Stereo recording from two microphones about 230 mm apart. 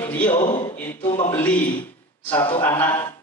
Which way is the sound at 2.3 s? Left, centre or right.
Left.